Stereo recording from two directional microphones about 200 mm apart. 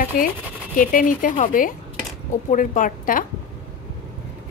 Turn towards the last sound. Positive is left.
turn(degrees=45)  # may be behind; listen again after turning